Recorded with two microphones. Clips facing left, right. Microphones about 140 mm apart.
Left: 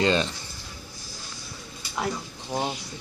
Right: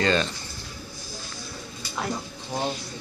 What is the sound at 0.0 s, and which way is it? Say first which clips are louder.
Speech: even; 20° left (ahead or behind).